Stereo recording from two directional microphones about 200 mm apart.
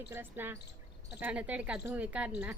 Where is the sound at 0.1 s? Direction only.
10° right (ahead or behind).